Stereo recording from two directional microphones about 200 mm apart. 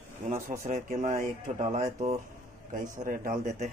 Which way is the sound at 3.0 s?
40° right (ahead or behind).